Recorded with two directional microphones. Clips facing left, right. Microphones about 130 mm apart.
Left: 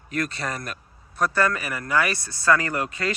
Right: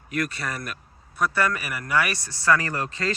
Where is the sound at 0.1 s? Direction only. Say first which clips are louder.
Even; 30° left (ahead or behind).